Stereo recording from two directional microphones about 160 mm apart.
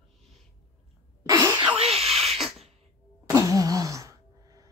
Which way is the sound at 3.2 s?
20° right (ahead or behind).